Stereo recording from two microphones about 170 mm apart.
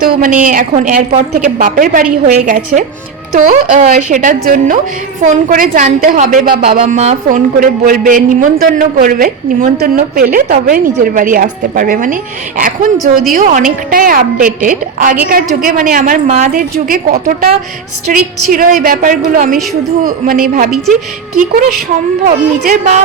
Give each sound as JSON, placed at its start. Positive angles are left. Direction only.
{"t": 0.0, "sound": "a woman's voice", "side_deg": -50}
{"t": 6.7, "sound": "a woman's voice", "side_deg": -40}
{"t": 16.2, "sound": "speech", "side_deg": -40}
{"t": 16.7, "sound": "speech", "side_deg": -60}
{"t": 18.1, "sound": "a woman's voice", "side_deg": -55}
{"t": 22.6, "sound": "a woman's voice", "side_deg": -50}